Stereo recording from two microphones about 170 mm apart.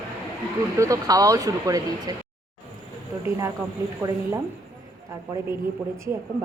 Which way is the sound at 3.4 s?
20° right (ahead or behind).